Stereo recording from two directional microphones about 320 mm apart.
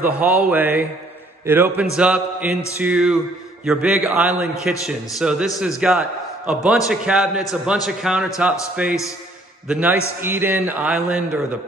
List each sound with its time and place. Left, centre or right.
0.0 s a man's voice: centre